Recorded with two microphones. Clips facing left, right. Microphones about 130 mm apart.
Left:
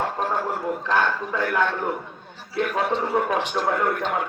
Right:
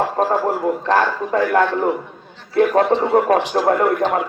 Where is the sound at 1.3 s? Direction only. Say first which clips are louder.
Right 11 dB; 55° right (ahead or behind).